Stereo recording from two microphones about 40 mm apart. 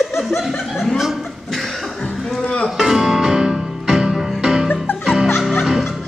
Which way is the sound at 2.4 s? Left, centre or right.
Left.